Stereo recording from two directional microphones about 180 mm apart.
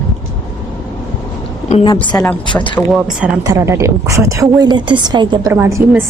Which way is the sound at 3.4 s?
15° right (ahead or behind).